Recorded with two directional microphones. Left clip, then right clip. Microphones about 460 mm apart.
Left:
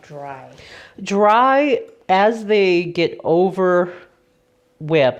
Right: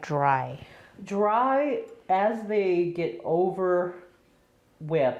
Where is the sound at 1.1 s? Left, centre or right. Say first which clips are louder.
Left 10 dB; left.